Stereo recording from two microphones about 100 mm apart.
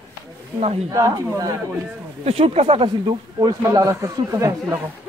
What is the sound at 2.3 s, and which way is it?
Speech, 80° right.